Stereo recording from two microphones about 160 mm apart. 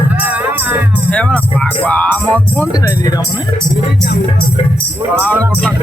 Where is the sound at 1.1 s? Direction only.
10° left (ahead or behind).